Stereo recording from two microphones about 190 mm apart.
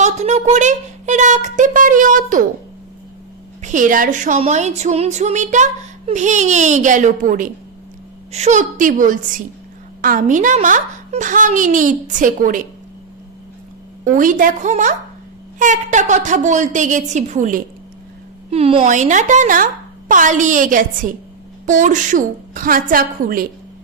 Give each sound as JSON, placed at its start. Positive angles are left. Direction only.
{"t": 0.0, "sound": "a woman's voice", "side_deg": -35}
{"t": 3.6, "sound": "a woman's voice", "side_deg": -40}
{"t": 14.0, "sound": "a child's voice", "side_deg": -45}
{"t": 18.5, "sound": "a woman's voice", "side_deg": -30}